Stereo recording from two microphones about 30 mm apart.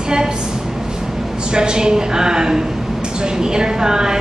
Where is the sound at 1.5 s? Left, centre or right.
Right.